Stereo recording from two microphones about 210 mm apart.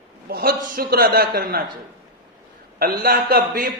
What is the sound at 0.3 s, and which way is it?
A man's voice, 45° right (ahead or behind).